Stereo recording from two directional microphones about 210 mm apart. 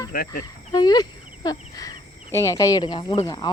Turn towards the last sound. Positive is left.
turn(degrees=20)  # may be behind; listen again after turning